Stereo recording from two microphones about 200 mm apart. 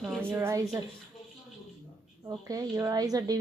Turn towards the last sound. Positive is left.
turn(degrees=-20)  # may be behind; listen again after turning